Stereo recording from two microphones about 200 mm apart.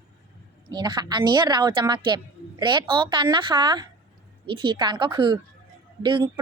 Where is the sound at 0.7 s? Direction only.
20° right (ahead or behind).